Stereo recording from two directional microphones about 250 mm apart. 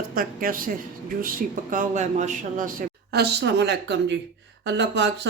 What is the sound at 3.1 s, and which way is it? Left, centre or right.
A woman's voice, right.